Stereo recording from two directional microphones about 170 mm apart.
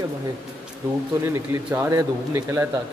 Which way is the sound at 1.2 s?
15° right (ahead or behind).